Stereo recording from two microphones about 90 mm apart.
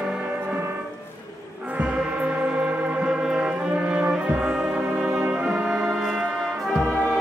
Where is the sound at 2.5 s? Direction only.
10° right (ahead or behind).